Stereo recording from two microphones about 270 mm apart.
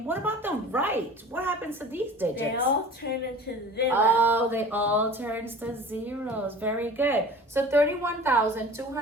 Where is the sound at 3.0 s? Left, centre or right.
Left.